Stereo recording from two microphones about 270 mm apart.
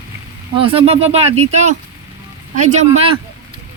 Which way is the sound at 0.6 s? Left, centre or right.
Right.